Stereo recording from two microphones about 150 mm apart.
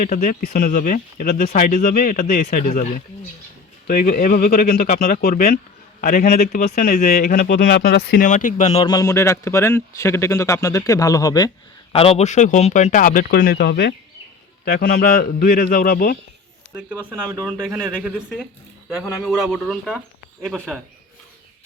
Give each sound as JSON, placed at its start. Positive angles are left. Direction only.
{"t": 0.0, "sound": "speech", "side_deg": 65}
{"t": 3.8, "sound": "speech", "side_deg": 75}
{"t": 8.3, "sound": "speech", "side_deg": 60}
{"t": 8.8, "sound": "speech", "side_deg": 25}
{"t": 11.9, "sound": "speech", "side_deg": 45}
{"t": 14.6, "sound": "speech", "side_deg": 80}
{"t": 16.7, "sound": "speech", "side_deg": -10}